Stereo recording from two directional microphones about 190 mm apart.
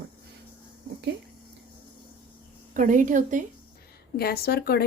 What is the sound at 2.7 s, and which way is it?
Speech, 45° right (ahead or behind).